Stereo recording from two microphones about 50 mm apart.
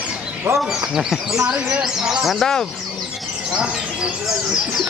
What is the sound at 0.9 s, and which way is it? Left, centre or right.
Speech, centre.